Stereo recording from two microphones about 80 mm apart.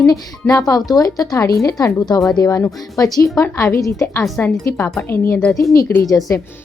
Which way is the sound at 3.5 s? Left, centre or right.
Left.